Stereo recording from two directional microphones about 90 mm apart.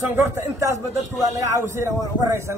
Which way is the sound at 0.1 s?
30° right (ahead or behind).